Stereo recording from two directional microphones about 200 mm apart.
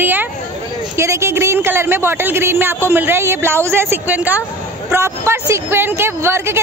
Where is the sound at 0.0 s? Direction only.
10° right (ahead or behind).